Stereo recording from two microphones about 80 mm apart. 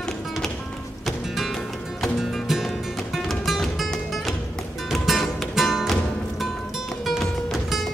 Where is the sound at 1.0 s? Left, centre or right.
Centre.